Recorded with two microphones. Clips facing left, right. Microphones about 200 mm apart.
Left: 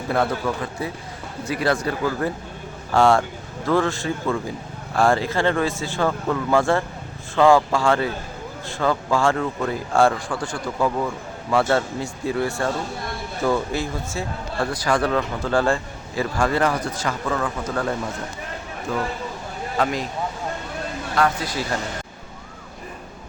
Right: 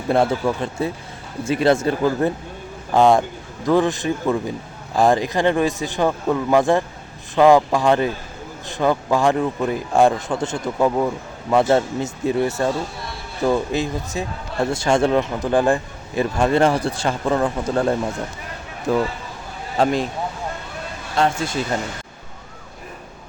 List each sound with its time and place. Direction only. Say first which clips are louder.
0.1 s speech: right 4 dB; 25° right (ahead or behind)
21.2 s speech: right 2 dB; 25° right (ahead or behind)